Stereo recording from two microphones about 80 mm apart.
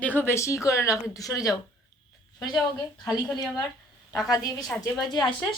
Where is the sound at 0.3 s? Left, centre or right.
Left.